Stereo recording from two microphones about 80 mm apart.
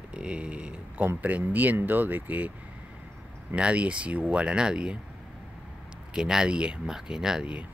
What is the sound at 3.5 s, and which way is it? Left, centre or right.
Speech, centre.